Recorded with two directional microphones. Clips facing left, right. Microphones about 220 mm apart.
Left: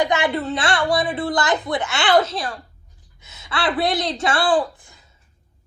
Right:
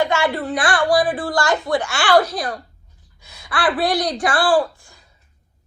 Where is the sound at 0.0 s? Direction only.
15° left (ahead or behind).